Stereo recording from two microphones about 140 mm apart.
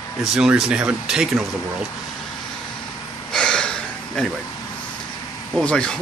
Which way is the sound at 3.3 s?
5° left (ahead or behind).